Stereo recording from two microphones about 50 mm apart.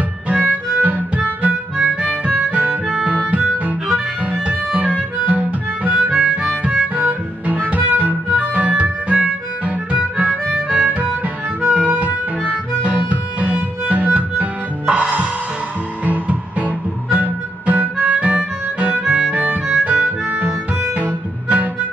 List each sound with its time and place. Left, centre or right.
0.3 s harmonica: right
3.3 s music: right
6.1 s harmonica: right
7.0 s music: right
11.6 s harmonica: right
14.9 s music: right
19.7 s harmonica: right